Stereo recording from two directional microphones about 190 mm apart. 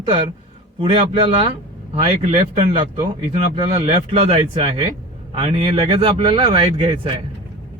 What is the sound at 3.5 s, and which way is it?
Speech, 30° right (ahead or behind).